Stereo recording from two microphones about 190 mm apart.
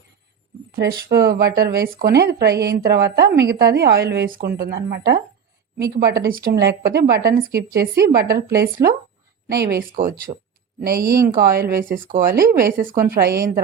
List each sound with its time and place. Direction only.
0.8 s a woman's voice: 50° right (ahead or behind)
9.9 s speech: 45° right (ahead or behind)
10.9 s speech: 15° right (ahead or behind)
11.3 s speech: 50° right (ahead or behind)